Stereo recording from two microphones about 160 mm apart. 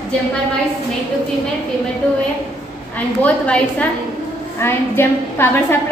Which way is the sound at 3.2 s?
10° left (ahead or behind).